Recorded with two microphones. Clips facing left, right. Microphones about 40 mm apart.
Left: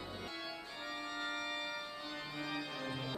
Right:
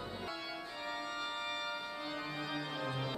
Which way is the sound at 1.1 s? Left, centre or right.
Centre.